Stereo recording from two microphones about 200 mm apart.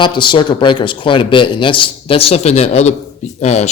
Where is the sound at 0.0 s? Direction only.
25° left (ahead or behind).